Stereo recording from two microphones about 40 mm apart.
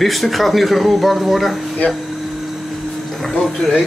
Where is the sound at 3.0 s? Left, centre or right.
Centre.